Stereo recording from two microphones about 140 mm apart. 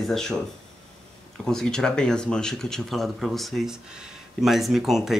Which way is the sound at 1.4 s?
5° left (ahead or behind).